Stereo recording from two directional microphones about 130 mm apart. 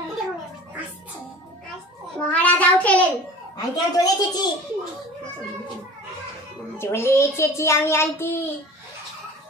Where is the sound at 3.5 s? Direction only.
30° left (ahead or behind).